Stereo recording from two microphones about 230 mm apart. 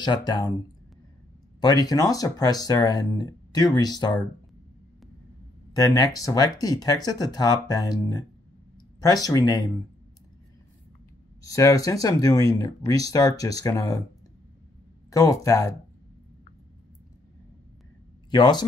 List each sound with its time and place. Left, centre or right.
0.0 s speech: centre
1.6 s speech: centre
5.7 s speech: centre
11.4 s speech: centre
15.0 s speech: centre
18.3 s speech: centre